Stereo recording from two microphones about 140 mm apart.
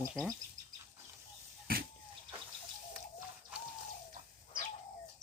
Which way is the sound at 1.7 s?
90° right.